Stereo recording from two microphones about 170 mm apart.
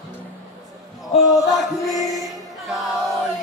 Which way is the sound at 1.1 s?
40° left (ahead or behind).